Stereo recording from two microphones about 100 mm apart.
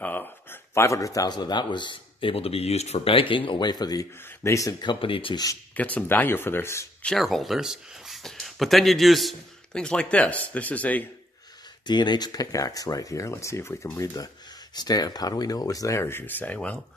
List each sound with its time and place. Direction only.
0.0 s speech: 20° left (ahead or behind)
4.8 s speech: 60° left (ahead or behind)
5.8 s speech: 15° left (ahead or behind)
7.2 s speech: centre (ahead or behind); by 11.1 s 15° left (ahead or behind)
11.8 s speech: 45° left (ahead or behind)
16.0 s speech: 25° left (ahead or behind)